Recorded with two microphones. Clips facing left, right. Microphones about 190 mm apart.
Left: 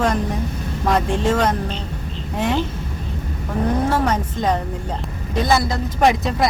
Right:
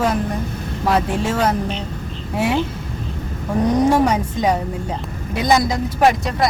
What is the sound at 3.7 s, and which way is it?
Speech, 15° right (ahead or behind).